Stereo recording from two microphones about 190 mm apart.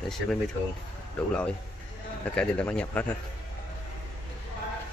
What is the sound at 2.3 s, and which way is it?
Speech, 5° left (ahead or behind).